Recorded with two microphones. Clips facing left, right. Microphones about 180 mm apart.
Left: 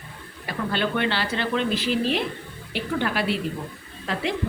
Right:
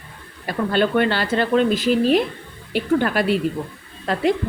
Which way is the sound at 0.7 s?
45° right (ahead or behind).